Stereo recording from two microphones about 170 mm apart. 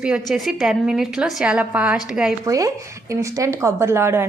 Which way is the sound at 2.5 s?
20° right (ahead or behind).